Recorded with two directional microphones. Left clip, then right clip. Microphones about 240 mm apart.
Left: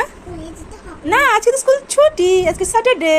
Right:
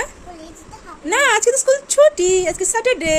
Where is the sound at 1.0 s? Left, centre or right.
Centre.